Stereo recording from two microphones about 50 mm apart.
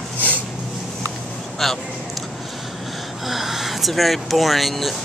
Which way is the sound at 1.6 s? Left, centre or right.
Centre.